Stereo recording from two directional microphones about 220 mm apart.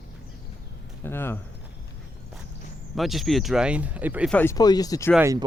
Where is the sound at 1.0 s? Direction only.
10° left (ahead or behind).